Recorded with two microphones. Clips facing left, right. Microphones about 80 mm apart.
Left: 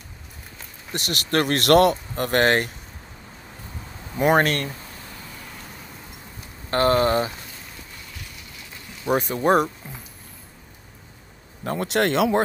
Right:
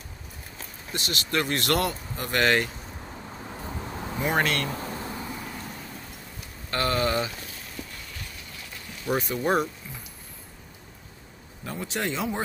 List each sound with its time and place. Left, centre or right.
0.9 s speech: left
4.2 s speech: left
6.7 s speech: left
9.2 s speech: left
11.6 s speech: left